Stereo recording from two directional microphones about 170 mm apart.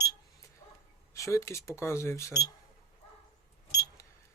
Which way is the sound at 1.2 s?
20° left (ahead or behind).